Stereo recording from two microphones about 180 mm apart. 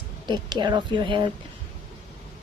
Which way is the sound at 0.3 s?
25° right (ahead or behind).